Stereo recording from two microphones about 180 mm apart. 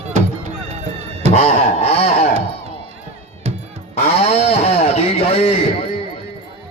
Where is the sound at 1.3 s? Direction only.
40° left (ahead or behind).